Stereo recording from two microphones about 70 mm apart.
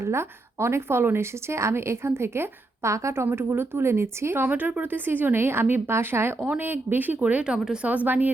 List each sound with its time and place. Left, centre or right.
0.0 s a woman's voice: right
3.2 s a woman's voice: right
4.5 s a woman's voice: right
7.5 s a woman's voice: centre
7.9 s speech: right